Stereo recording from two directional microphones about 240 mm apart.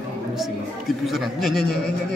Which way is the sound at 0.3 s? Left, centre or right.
Centre.